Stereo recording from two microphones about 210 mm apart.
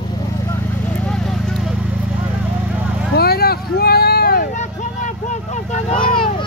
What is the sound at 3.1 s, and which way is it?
Vehicle, 50° left (ahead or behind).